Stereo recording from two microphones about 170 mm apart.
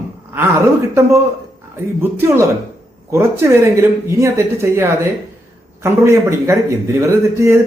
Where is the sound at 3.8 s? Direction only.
15° right (ahead or behind).